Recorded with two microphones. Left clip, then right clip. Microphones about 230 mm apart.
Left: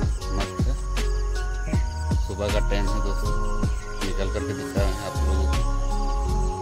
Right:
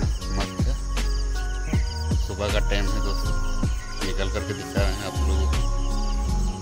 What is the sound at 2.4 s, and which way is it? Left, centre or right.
Speech, centre.